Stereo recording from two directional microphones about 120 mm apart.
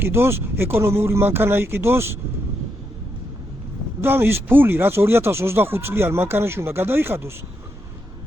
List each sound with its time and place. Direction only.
0.0 s speech: 20° right (ahead or behind)
4.0 s speech: 20° right (ahead or behind)